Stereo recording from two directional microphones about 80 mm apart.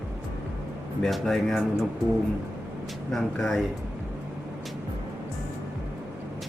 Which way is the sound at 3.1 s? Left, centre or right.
Centre.